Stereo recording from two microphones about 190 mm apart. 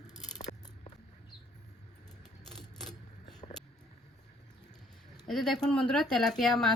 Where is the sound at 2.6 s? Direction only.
Centre (ahead or behind).